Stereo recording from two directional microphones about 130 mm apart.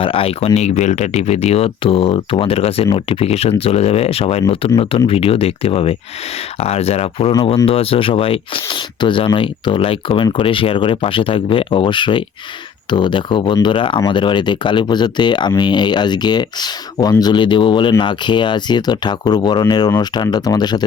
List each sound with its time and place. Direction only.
0.0 s speech: 45° left (ahead or behind)